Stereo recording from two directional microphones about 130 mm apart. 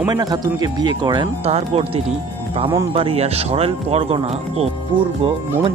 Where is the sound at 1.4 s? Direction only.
55° right (ahead or behind).